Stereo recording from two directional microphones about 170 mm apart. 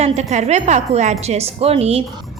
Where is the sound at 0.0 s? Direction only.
40° right (ahead or behind).